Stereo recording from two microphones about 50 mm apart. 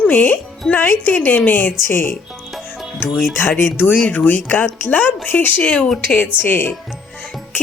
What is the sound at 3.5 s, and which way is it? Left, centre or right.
Speech, left.